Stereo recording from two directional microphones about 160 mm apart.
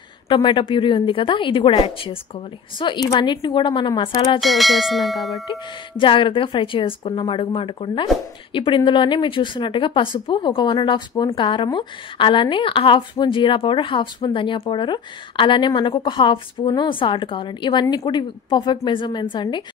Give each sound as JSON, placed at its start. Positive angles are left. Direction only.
{"t": 0.3, "sound": "a woman's voice", "side_deg": 30}
{"t": 4.4, "sound": "bell", "side_deg": 0}
{"t": 5.5, "sound": "speech", "side_deg": 30}